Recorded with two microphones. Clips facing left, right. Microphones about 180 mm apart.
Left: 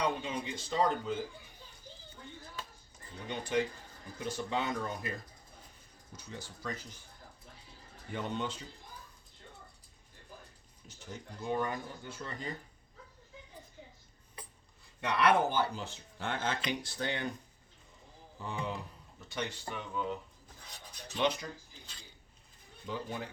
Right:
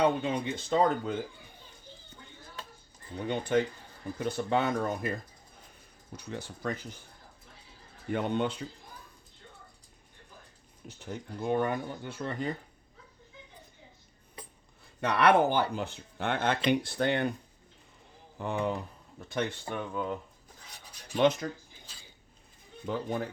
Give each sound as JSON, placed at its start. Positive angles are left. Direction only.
{"t": 0.0, "sound": "speech", "side_deg": -55}
{"t": 3.2, "sound": "speech", "side_deg": -55}
{"t": 6.1, "sound": "speech", "side_deg": -60}
{"t": 8.1, "sound": "speech", "side_deg": -60}
{"t": 10.8, "sound": "speech", "side_deg": -60}
{"t": 15.1, "sound": "speech", "side_deg": -65}
{"t": 18.3, "sound": "speech", "side_deg": -60}
{"t": 21.2, "sound": "speech", "side_deg": -50}
{"t": 22.9, "sound": "speech", "side_deg": -50}